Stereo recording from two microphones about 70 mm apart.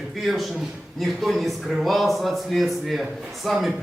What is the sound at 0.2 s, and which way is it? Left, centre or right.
A man's voice, centre.